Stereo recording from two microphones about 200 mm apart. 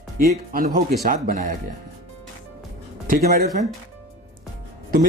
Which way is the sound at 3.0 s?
40° right (ahead or behind).